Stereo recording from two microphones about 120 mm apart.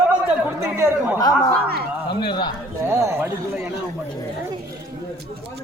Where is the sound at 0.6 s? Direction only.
20° right (ahead or behind).